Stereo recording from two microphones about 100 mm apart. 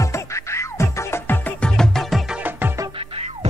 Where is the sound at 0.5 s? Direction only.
25° left (ahead or behind).